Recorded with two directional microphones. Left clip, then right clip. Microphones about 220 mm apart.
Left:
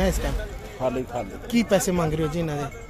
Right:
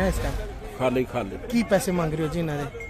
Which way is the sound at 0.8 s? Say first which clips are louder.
Right 2 dB; 55° right (ahead or behind).